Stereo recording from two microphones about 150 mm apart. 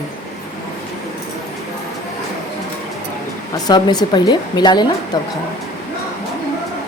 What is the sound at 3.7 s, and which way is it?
Speech, 30° left (ahead or behind).